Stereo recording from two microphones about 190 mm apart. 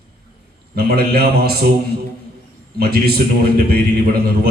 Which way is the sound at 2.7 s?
55° right (ahead or behind).